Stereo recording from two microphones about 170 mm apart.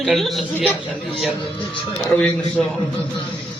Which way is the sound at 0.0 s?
Centre (ahead or behind).